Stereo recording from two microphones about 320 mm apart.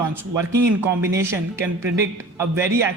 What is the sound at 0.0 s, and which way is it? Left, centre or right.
Speech, centre.